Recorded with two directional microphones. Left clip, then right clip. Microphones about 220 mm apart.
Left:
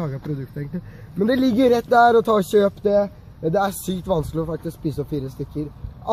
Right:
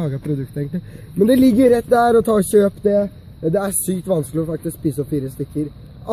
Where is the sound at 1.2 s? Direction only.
40° right (ahead or behind).